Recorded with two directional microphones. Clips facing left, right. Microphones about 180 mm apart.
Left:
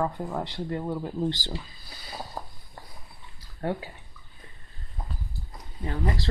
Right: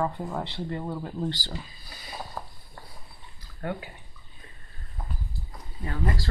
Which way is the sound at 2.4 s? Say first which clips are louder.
Left 1 dB; 25° left (ahead or behind).